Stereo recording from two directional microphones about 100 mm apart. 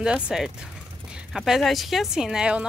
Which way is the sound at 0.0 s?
5° right (ahead or behind).